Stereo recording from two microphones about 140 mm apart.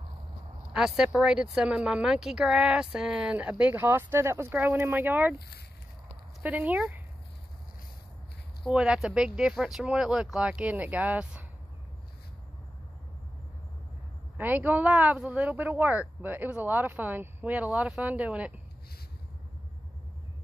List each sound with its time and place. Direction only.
0.7 s speech: 5° right (ahead or behind)
6.4 s speech: 10° right (ahead or behind)
8.7 s speech: 5° right (ahead or behind)
14.3 s speech: 10° right (ahead or behind)